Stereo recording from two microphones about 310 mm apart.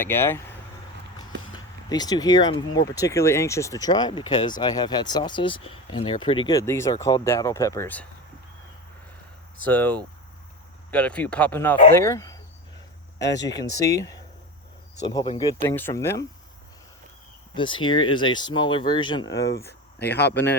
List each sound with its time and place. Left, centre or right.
0.0 s speech: centre
1.5 s speech: centre
9.6 s speech: centre
17.5 s speech: centre
20.0 s speech: left